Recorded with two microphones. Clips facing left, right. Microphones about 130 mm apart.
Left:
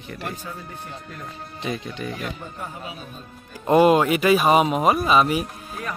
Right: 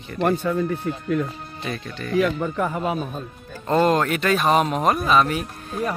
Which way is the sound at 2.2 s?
90° right.